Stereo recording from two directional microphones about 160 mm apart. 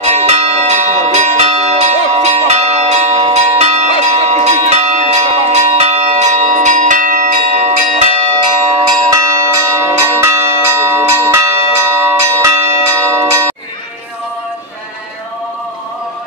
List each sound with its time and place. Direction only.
0.0 s church bell: 40° right (ahead or behind)
9.1 s church bell: 20° right (ahead or behind)